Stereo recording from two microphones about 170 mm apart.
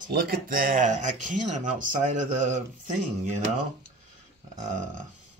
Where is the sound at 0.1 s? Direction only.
60° right (ahead or behind).